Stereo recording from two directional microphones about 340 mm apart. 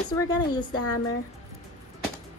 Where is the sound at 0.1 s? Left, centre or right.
Centre.